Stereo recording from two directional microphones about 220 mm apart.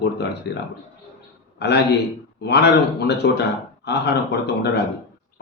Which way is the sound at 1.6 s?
50° left (ahead or behind).